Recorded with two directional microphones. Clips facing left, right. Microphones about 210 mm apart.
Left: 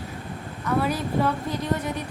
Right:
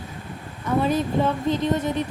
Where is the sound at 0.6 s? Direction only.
25° right (ahead or behind).